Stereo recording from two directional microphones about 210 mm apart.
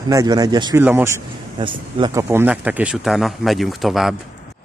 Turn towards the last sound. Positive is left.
turn(degrees=0)  # may be behind; listen again after turning